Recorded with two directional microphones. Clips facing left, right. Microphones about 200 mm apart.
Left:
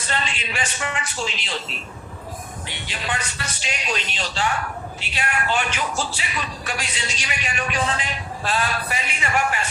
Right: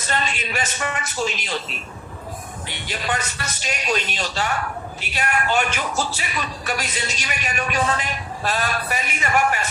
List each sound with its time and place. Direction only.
0.1 s speech: 45° right (ahead or behind)
2.8 s speech: 45° right (ahead or behind)